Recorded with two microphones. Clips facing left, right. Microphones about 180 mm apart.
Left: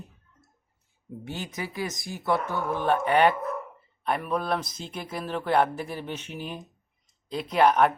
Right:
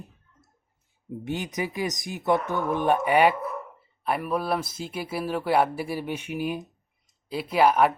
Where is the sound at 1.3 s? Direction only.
20° right (ahead or behind).